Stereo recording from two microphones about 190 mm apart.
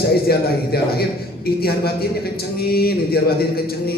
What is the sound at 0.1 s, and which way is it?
A man's voice, 55° left (ahead or behind).